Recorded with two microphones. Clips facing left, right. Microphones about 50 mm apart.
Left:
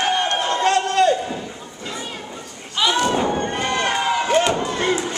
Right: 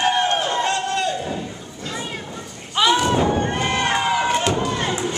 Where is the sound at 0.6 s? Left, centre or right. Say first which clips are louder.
Left 5 dB; left.